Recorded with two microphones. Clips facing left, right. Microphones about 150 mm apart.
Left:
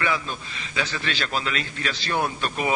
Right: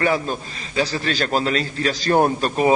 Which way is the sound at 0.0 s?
40° right (ahead or behind).